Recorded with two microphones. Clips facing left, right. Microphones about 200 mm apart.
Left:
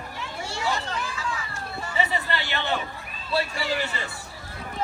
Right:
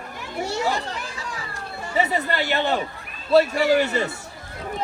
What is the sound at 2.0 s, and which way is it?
Speech, 45° right (ahead or behind).